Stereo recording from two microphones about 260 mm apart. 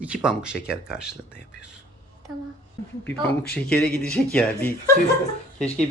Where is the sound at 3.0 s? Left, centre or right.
Centre.